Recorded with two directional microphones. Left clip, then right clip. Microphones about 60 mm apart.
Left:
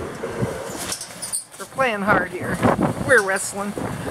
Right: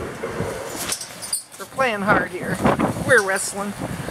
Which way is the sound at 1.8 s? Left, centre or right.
Centre.